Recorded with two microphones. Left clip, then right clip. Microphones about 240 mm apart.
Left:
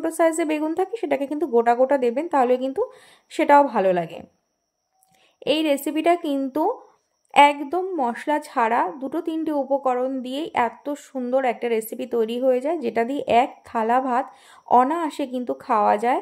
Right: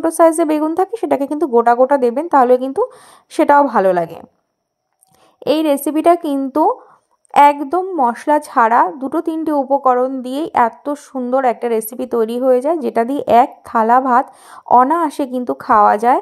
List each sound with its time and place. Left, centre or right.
0.0 s a woman's voice: centre
5.4 s a woman's voice: right